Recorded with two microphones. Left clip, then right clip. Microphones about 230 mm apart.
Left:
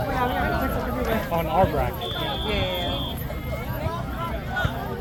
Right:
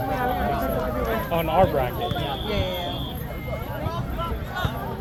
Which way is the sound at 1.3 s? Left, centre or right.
Right.